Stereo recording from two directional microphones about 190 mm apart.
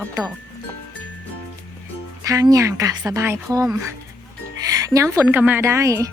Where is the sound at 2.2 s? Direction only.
20° right (ahead or behind).